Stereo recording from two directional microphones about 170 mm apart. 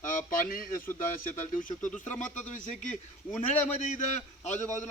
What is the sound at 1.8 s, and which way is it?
Speech, 10° left (ahead or behind).